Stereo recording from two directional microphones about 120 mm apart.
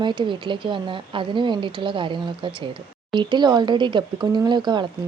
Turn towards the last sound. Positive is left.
turn(degrees=-40)  # may be behind; listen again after turning